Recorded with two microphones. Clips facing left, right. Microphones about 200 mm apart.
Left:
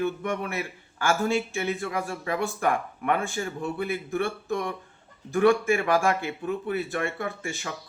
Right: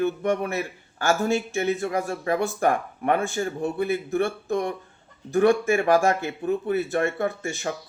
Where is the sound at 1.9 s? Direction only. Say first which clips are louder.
Right 4 dB; 40° right (ahead or behind).